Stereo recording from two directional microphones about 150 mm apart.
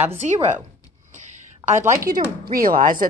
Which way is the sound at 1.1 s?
50° right (ahead or behind).